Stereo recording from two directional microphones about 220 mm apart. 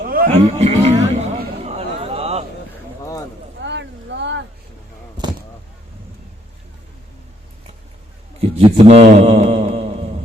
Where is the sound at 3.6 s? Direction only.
55° right (ahead or behind).